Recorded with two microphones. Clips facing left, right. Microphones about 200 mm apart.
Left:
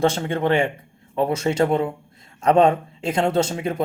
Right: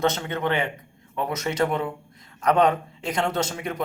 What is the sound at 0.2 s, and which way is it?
Speech, 30° left (ahead or behind).